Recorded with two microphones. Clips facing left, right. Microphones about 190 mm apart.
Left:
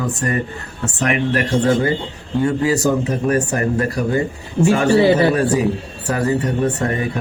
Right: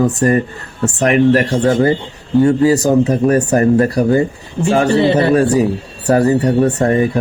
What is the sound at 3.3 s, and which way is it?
Speech, 35° right (ahead or behind).